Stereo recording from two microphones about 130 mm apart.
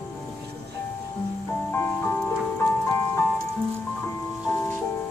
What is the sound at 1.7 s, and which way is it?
Music, 20° left (ahead or behind).